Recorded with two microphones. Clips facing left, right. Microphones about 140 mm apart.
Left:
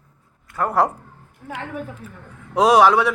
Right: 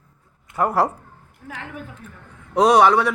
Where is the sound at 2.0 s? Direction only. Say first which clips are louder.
Left 3 dB; 5° left (ahead or behind).